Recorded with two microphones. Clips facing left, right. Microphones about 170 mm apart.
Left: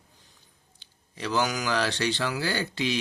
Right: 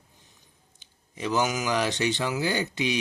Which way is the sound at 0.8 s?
20° right (ahead or behind).